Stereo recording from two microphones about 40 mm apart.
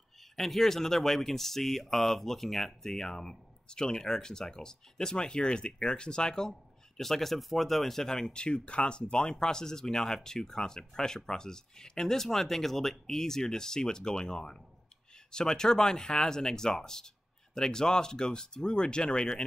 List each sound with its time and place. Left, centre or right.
0.4 s speech: centre
7.0 s speech: centre
8.3 s speech: left